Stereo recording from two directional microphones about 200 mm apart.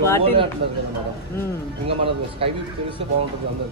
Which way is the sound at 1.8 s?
30° right (ahead or behind).